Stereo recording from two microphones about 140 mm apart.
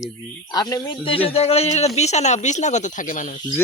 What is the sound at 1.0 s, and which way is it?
Speech, 40° left (ahead or behind).